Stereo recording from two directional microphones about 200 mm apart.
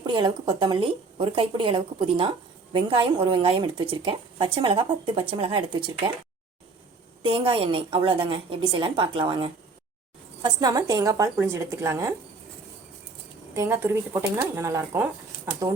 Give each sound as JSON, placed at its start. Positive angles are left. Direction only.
{"t": 0.0, "sound": "speech", "side_deg": -25}
{"t": 7.2, "sound": "speech", "side_deg": -25}
{"t": 13.5, "sound": "speech", "side_deg": -15}